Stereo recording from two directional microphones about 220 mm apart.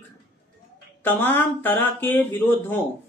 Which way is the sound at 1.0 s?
10° left (ahead or behind).